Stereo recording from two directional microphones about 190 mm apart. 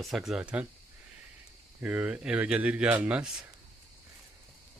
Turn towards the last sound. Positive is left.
turn(degrees=-5)  # may be behind; listen again after turning